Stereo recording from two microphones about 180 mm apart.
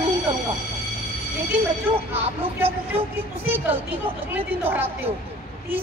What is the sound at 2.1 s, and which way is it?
Speech, 35° right (ahead or behind).